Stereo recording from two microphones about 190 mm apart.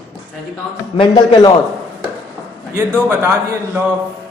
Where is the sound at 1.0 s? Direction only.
25° left (ahead or behind).